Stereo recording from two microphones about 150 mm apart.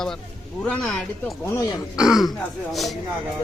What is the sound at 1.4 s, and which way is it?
Speech, 20° left (ahead or behind).